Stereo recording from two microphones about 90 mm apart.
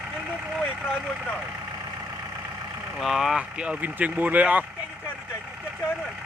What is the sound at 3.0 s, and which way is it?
Speech, 5° right (ahead or behind).